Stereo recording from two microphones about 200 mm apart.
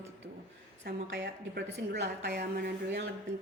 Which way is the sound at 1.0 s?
65° right (ahead or behind).